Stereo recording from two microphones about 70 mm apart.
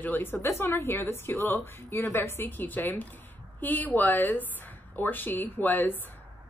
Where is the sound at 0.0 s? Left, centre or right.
Left.